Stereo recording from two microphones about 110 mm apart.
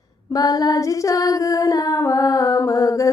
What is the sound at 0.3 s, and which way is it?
Female singing, 35° left (ahead or behind).